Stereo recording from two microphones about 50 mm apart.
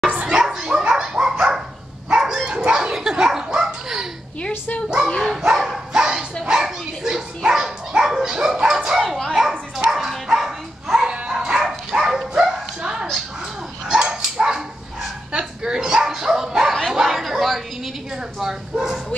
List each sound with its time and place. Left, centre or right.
0.1 s dog: right
0.4 s dog: centre
2.9 s slap: centre
4.4 s dog: left
5.0 s bow-wow: centre
5.4 s dog: centre
9.5 s bow-wow: centre
13.8 s dog: centre
16.9 s chatter: centre
18.4 s bow-wow: centre